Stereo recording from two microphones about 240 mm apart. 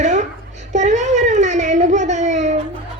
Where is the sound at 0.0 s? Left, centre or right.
Right.